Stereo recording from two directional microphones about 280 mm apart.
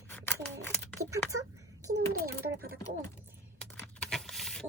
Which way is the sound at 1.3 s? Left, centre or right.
Right.